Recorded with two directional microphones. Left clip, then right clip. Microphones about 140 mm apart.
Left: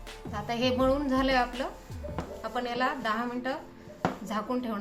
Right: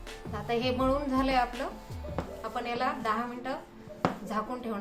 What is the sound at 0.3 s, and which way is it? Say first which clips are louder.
Speech: left 2 dB; 25° left (ahead or behind).